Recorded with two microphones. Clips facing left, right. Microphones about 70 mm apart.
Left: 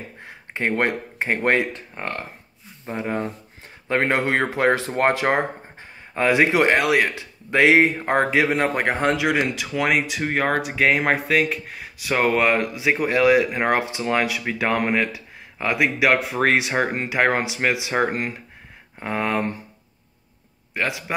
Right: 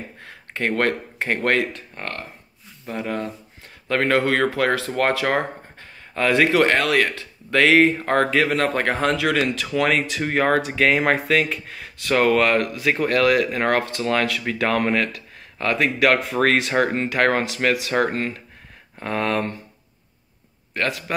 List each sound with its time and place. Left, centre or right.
0.2 s speech: centre
20.7 s a man's voice: centre